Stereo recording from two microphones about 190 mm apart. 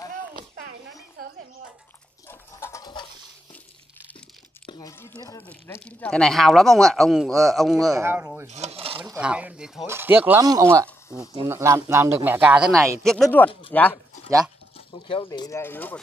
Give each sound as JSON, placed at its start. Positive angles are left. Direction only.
{"t": 2.2, "sound": "pant", "side_deg": 15}
{"t": 4.6, "sound": "speech", "side_deg": 20}
{"t": 7.9, "sound": "speech", "side_deg": -10}
{"t": 8.5, "sound": "speech", "side_deg": -35}
{"t": 9.2, "sound": "speech", "side_deg": -5}
{"t": 15.2, "sound": "speech", "side_deg": 15}